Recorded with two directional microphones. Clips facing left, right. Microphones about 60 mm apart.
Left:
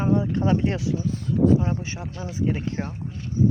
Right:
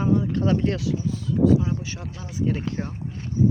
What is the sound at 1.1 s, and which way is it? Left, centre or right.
Speech, left.